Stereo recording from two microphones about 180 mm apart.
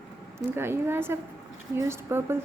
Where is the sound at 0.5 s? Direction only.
15° right (ahead or behind).